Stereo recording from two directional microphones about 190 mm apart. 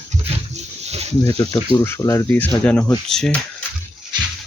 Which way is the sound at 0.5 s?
35° right (ahead or behind).